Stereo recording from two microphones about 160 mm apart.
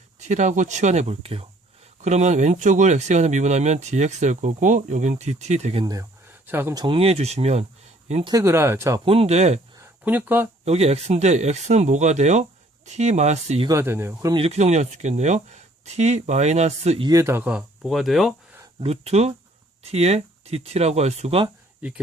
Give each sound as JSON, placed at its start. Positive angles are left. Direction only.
{"t": 0.2, "sound": "speech", "side_deg": -45}
{"t": 5.8, "sound": "speech", "side_deg": -25}
{"t": 6.7, "sound": "speech", "side_deg": -35}
{"t": 8.2, "sound": "speech", "side_deg": -25}
{"t": 9.0, "sound": "speech", "side_deg": -40}
{"t": 10.0, "sound": "speech", "side_deg": -10}
{"t": 10.7, "sound": "speech", "side_deg": -40}
{"t": 13.7, "sound": "speech", "side_deg": -15}
{"t": 14.3, "sound": "speech", "side_deg": -40}
{"t": 17.1, "sound": "speech", "side_deg": -20}
{"t": 18.8, "sound": "speech", "side_deg": -40}
{"t": 21.8, "sound": "speech", "side_deg": -10}